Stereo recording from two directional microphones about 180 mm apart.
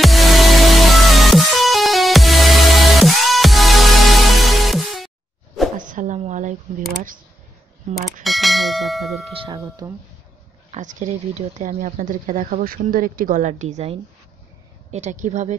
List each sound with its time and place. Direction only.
0.0 s music: centre (ahead or behind)
5.8 s a sound: 45° right (ahead or behind)
7.9 s clang: centre (ahead or behind)
9.8 s speech: 20° right (ahead or behind)
10.7 s speech: 45° right (ahead or behind)